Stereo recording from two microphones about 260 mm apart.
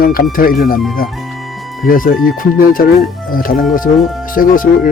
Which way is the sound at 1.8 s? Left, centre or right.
Left.